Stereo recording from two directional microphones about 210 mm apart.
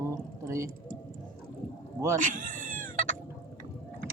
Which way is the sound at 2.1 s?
40° right (ahead or behind).